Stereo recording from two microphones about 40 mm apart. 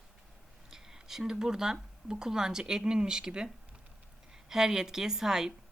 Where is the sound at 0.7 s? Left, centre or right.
Centre.